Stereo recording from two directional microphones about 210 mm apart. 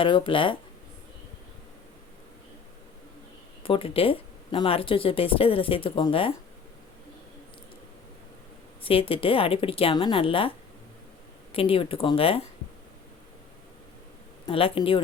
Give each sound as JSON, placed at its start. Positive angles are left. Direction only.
{"t": 0.0, "sound": "speech", "side_deg": 25}
{"t": 3.6, "sound": "speech", "side_deg": 25}
{"t": 8.8, "sound": "speech", "side_deg": 25}
{"t": 11.5, "sound": "speech", "side_deg": 25}
{"t": 14.4, "sound": "speech", "side_deg": 25}